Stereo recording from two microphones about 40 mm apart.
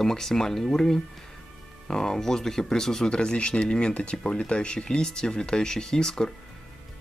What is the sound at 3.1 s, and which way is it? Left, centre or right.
Speech, left.